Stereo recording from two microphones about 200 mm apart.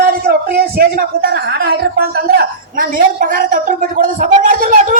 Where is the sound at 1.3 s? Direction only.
55° right (ahead or behind).